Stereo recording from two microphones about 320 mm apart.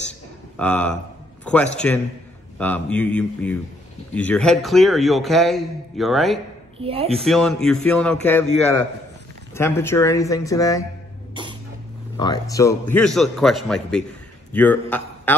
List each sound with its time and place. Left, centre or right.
0.6 s a man's voice: centre
1.4 s a sound: centre
2.6 s a man's voice: centre
6.8 s speech: centre
7.2 s a man's voice: centre
12.2 s a man's voice: centre